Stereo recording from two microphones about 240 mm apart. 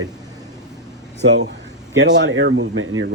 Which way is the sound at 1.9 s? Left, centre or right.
Right.